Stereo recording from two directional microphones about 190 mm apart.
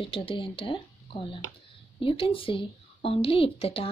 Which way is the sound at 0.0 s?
30° left (ahead or behind).